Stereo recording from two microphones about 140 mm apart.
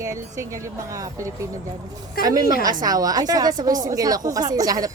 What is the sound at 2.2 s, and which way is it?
Speech, 90° left.